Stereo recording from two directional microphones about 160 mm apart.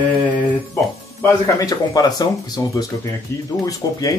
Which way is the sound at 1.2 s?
20° left (ahead or behind).